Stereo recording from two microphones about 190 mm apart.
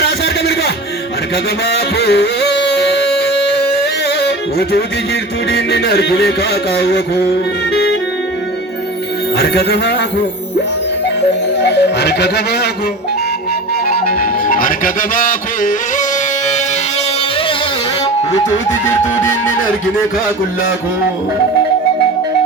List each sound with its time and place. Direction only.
0.0 s music: 60° left (ahead or behind)
7.7 s clarinet: 60° left (ahead or behind)
9.4 s music: 60° left (ahead or behind)
11.6 s music: 60° left (ahead or behind)
13.8 s music: 50° left (ahead or behind)